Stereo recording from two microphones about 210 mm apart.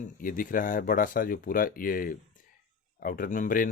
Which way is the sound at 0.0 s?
40° left (ahead or behind).